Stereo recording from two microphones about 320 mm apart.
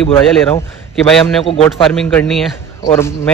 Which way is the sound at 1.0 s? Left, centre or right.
Centre.